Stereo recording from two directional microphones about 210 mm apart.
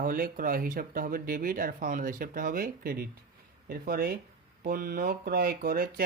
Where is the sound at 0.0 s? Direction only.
40° right (ahead or behind).